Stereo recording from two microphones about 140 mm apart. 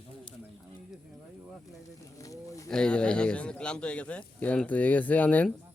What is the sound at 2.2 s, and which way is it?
Speech, 25° left (ahead or behind).